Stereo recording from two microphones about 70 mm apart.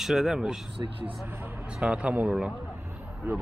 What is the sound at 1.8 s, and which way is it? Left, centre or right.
Speech, centre.